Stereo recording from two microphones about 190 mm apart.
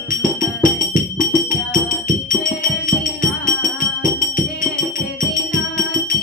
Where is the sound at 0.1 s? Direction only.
45° left (ahead or behind).